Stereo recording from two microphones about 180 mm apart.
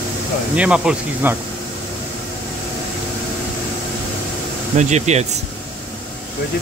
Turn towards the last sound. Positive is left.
turn(degrees=-40)  # may be behind; listen again after turning